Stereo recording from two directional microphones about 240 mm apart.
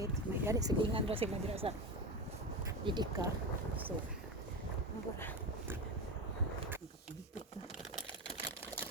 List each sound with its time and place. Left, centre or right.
0.0 s speech: centre
2.8 s speech: centre